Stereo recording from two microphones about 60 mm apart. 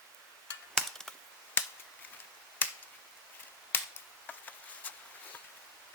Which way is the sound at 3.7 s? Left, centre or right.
Left.